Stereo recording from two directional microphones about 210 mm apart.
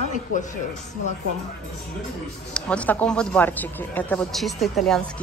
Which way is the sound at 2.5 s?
5° left (ahead or behind).